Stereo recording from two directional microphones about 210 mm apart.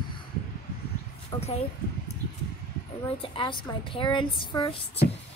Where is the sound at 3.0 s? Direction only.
25° left (ahead or behind).